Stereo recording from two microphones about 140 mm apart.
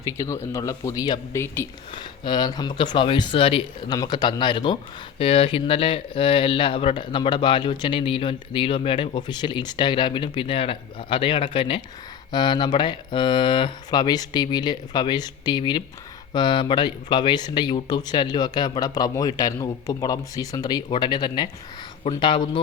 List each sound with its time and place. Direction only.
0.0 s speech: 20° left (ahead or behind); by 3.8 s 40° left (ahead or behind)
3.8 s speech: 30° left (ahead or behind)